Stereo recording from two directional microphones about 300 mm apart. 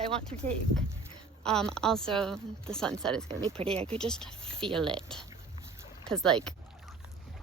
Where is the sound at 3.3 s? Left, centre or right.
Centre.